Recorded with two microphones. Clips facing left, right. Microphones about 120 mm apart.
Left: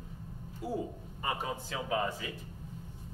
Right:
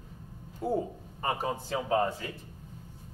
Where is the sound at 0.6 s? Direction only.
55° right (ahead or behind).